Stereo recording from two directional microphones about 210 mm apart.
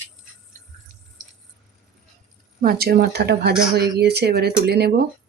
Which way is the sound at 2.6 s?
45° right (ahead or behind).